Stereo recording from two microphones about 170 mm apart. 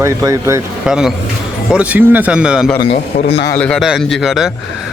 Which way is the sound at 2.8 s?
35° left (ahead or behind).